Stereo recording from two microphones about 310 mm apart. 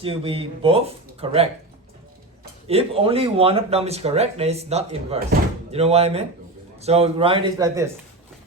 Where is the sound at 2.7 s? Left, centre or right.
Centre.